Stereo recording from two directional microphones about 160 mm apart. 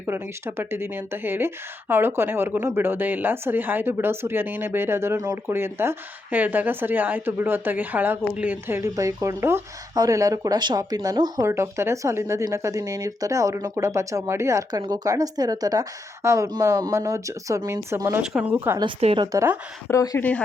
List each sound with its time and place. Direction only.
0.1 s a woman's voice: 15° right (ahead or behind)
18.2 s a woman's voice: 5° right (ahead or behind)
18.9 s speech: 40° right (ahead or behind)
19.2 s a woman's voice: 20° right (ahead or behind)
19.9 s speech: 15° left (ahead or behind)